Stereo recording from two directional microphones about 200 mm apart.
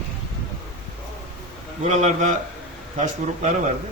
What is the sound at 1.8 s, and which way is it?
Speech, 35° right (ahead or behind).